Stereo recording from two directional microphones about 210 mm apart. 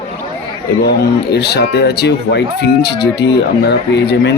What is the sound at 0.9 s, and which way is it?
Speech, 50° left (ahead or behind).